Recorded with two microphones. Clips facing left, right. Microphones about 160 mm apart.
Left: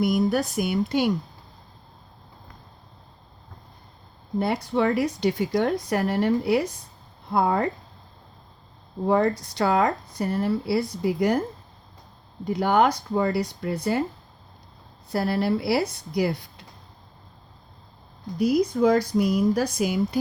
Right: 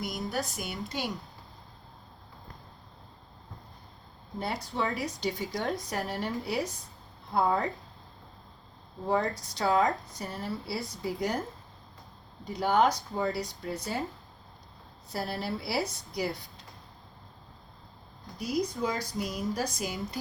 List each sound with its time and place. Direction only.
0.0 s speech: 60° left (ahead or behind)
4.4 s speech: 60° left (ahead or behind)
9.0 s speech: 60° left (ahead or behind)
12.5 s speech: 65° left (ahead or behind)
15.1 s speech: 65° left (ahead or behind)
18.3 s speech: 60° left (ahead or behind)